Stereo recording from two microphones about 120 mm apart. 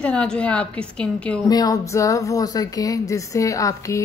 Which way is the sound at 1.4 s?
30° left (ahead or behind).